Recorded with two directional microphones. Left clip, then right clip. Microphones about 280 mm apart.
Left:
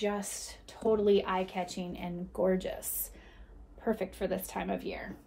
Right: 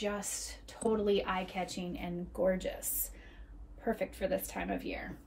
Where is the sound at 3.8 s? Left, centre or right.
Centre.